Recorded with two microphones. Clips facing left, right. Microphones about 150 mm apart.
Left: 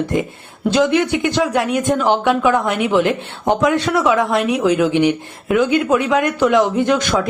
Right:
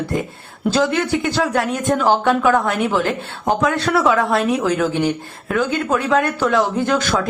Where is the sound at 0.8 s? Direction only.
15° left (ahead or behind).